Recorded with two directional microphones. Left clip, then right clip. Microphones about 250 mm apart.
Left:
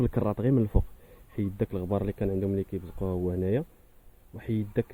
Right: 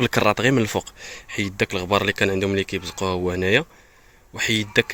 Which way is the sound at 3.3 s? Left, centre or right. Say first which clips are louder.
Right 10 dB; centre.